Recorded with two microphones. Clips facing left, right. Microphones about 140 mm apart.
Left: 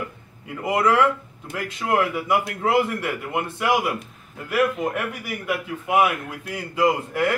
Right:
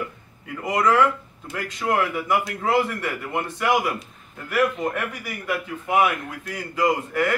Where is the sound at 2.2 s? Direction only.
20° left (ahead or behind).